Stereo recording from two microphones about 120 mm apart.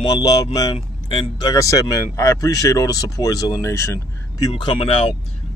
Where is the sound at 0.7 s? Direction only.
50° left (ahead or behind).